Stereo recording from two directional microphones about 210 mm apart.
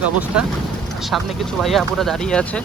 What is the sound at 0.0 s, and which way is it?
Speech, 5° right (ahead or behind).